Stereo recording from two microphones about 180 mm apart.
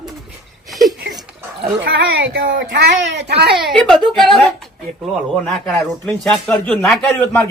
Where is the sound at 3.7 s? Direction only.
Centre (ahead or behind).